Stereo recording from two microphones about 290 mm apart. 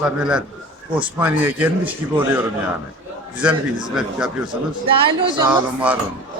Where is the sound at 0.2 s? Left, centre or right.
Centre.